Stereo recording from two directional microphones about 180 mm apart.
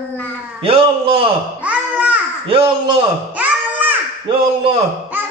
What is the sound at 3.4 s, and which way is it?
Music, 10° right (ahead or behind).